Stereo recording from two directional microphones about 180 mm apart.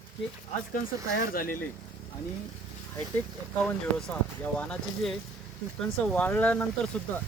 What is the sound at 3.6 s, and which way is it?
Speech, 5° left (ahead or behind).